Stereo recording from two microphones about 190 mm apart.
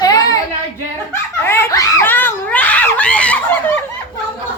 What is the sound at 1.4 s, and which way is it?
Screaming, 10° left (ahead or behind).